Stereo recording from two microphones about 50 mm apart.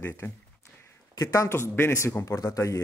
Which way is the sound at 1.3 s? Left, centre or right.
Left.